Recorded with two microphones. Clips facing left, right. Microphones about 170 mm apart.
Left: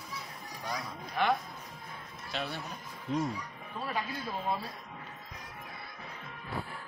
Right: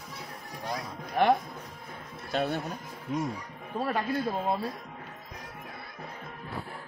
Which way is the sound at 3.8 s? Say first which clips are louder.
Right 7 dB; 55° right (ahead or behind).